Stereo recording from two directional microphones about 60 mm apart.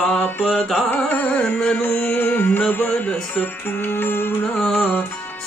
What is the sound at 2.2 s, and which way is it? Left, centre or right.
Music, left.